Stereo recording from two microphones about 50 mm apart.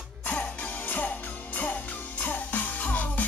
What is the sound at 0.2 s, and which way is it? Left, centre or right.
Music, left.